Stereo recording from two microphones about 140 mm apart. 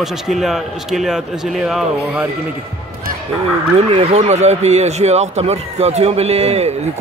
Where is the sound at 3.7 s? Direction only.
45° right (ahead or behind).